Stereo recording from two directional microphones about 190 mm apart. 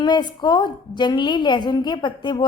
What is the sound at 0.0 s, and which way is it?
A woman's voice, 20° left (ahead or behind).